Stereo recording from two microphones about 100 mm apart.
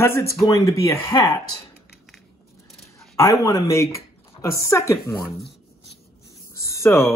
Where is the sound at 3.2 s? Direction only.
35° left (ahead or behind).